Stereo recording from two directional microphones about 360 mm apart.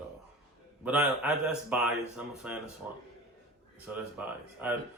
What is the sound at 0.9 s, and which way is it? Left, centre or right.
A man's voice, centre.